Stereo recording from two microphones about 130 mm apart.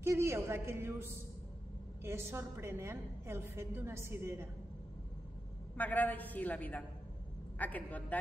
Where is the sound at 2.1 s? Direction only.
20° right (ahead or behind).